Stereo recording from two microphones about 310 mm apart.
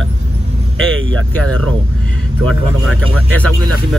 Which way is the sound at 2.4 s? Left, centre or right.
Right.